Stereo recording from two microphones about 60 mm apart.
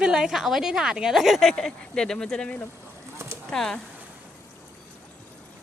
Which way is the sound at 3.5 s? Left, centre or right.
Centre.